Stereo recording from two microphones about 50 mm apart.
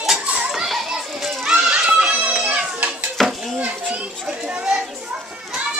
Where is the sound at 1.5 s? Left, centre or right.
Centre.